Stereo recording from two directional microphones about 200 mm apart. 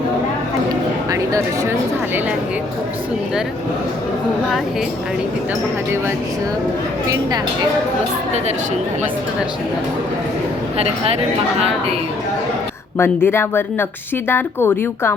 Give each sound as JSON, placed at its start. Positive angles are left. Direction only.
{"t": 10.8, "sound": "speech", "side_deg": -30}
{"t": 13.0, "sound": "speech", "side_deg": 10}